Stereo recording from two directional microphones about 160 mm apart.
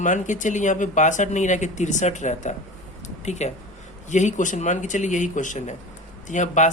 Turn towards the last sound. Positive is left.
turn(degrees=50)  # may be behind; listen again after turning